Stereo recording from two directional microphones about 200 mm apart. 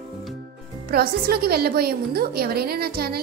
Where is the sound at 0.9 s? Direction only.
50° right (ahead or behind).